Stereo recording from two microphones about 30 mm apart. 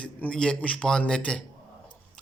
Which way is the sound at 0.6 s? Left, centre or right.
Left.